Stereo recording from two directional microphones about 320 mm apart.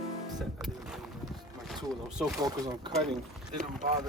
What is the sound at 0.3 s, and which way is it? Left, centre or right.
Music, centre.